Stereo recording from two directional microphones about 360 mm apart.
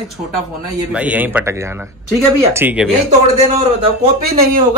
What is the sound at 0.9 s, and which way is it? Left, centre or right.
A man's voice, centre.